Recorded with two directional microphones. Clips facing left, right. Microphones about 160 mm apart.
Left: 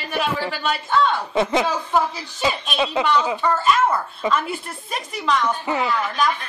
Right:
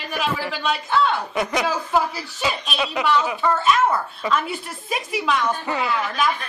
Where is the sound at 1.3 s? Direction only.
25° left (ahead or behind).